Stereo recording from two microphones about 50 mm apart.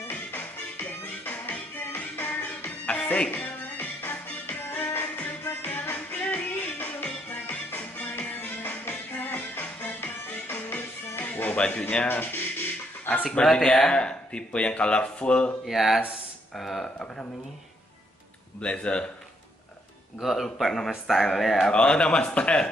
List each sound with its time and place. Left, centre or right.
0.0 s music: left
11.5 s speech: left
12.1 s speech: left
13.2 s speech: left
15.6 s speech: centre
18.6 s speech: left
20.2 s speech: centre
21.7 s speech: left